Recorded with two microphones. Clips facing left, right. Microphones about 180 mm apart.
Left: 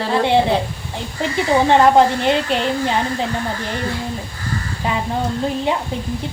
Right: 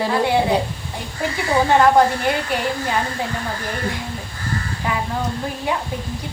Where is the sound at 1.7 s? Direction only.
25° left (ahead or behind).